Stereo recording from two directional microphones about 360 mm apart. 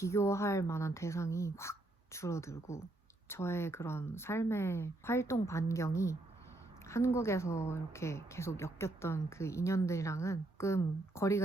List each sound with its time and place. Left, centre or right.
0.0 s a woman's voice: centre